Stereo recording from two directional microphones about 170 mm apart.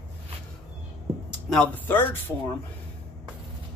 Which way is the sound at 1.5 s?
10° left (ahead or behind).